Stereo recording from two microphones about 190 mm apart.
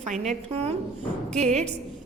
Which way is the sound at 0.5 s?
35° right (ahead or behind).